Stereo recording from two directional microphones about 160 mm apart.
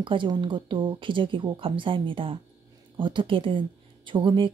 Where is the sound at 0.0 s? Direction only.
30° right (ahead or behind).